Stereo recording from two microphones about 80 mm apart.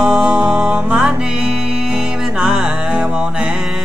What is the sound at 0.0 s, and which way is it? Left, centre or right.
Music, centre.